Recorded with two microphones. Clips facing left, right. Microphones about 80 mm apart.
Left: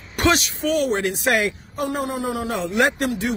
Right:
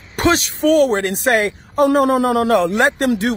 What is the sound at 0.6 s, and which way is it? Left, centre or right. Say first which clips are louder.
Speech: right 7 dB; right.